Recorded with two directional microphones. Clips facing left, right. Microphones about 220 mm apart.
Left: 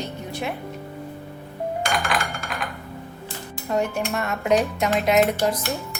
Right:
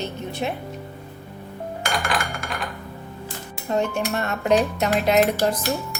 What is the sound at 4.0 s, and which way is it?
Speech, 35° right (ahead or behind).